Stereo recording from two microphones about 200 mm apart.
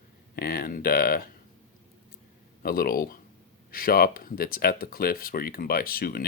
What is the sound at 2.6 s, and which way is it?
Speech, 50° left (ahead or behind).